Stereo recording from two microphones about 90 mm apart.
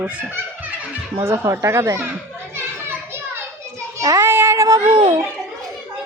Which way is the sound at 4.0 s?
35° right (ahead or behind).